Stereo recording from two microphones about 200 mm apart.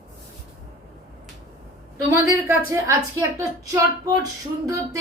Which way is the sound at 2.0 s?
15° right (ahead or behind).